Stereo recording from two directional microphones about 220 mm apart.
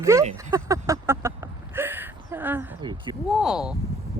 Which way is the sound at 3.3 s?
Centre (ahead or behind).